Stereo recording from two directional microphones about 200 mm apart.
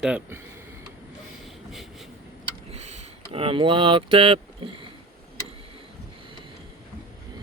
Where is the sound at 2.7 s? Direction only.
35° right (ahead or behind).